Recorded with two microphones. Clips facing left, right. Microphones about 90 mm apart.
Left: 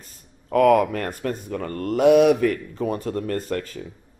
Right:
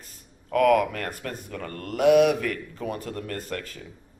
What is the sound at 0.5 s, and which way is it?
Speech, 30° left (ahead or behind).